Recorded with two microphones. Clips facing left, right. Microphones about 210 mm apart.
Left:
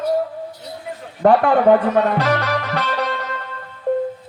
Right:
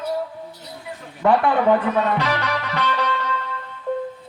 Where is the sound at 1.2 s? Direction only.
50° left (ahead or behind).